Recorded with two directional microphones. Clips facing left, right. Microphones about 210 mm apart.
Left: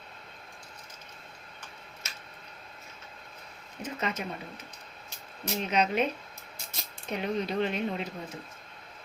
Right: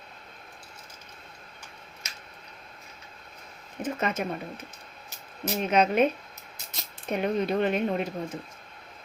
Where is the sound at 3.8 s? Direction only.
50° right (ahead or behind).